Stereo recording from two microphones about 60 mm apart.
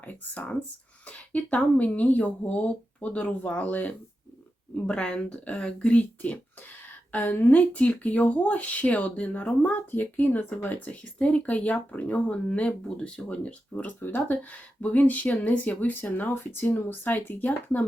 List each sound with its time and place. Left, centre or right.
0.0 s speech: left
4.7 s speech: centre
6.8 s a sound: left
7.5 s speech: left
14.0 s speech: left